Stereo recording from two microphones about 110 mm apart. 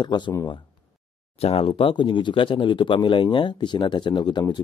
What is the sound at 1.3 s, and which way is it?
Speech, 65° left (ahead or behind).